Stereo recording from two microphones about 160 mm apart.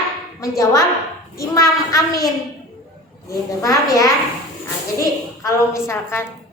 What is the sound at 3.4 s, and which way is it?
A woman's voice, 20° left (ahead or behind).